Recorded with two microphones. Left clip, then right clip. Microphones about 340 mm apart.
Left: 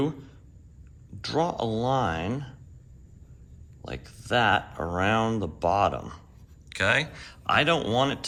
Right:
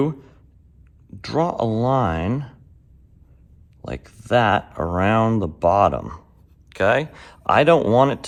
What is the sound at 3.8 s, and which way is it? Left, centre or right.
Speech, centre.